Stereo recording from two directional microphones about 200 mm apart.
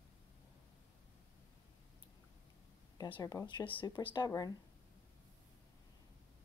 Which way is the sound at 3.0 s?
20° left (ahead or behind).